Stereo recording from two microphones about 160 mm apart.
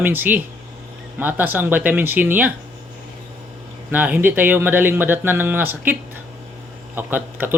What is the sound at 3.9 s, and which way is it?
Speech, 10° right (ahead or behind).